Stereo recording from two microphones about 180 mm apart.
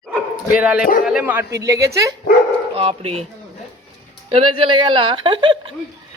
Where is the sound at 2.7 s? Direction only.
35° right (ahead or behind).